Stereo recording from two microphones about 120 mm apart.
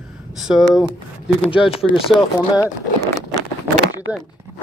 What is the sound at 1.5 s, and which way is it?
Speech, 50° left (ahead or behind).